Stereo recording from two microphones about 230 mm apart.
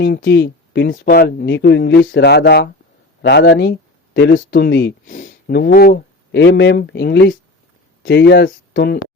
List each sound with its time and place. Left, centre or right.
0.0 s speech: left
5.0 s speech: left